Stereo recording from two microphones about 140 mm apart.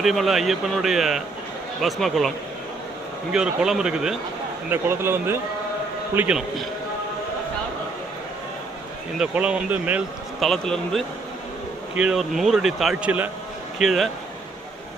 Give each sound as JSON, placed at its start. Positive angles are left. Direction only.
{"t": 0.0, "sound": "speech", "side_deg": 0}
{"t": 3.3, "sound": "speech", "side_deg": -5}
{"t": 4.7, "sound": "speech", "side_deg": -15}
{"t": 9.1, "sound": "speech", "side_deg": -5}
{"t": 10.4, "sound": "speech", "side_deg": 0}
{"t": 13.7, "sound": "speech", "side_deg": 0}